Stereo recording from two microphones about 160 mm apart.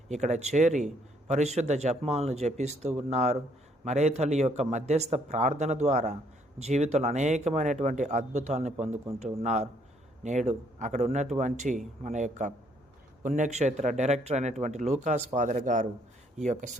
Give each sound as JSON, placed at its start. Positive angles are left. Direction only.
{"t": 0.1, "sound": "speech", "side_deg": -45}